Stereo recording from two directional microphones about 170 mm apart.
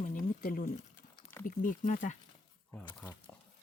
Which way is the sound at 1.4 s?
50° left (ahead or behind).